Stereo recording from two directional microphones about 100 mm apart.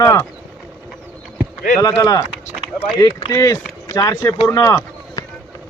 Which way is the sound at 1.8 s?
35° left (ahead or behind).